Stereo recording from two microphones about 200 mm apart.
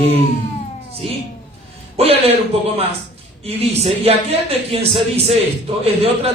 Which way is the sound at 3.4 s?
30° right (ahead or behind).